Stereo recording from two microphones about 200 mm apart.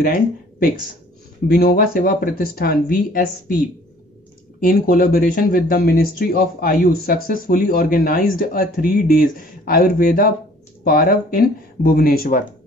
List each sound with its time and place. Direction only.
0.0 s speech: 45° left (ahead or behind)
4.6 s speech: 45° left (ahead or behind)